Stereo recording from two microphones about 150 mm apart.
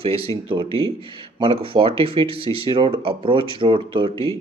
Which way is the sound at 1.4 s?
35° right (ahead or behind).